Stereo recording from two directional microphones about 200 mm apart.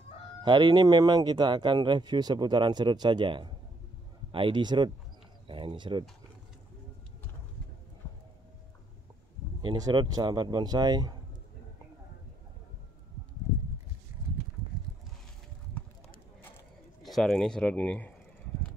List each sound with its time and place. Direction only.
0.4 s speech: 20° right (ahead or behind)
9.6 s speech: 20° right (ahead or behind)
17.0 s speech: centre (ahead or behind)